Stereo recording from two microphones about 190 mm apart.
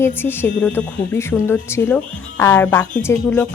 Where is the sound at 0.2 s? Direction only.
10° left (ahead or behind).